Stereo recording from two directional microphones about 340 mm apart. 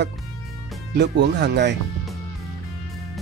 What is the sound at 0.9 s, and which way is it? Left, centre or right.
Speech, right.